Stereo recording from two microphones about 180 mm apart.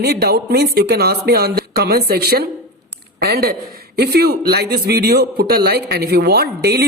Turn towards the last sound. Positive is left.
turn(degrees=-65)  # may be behind; listen again after turning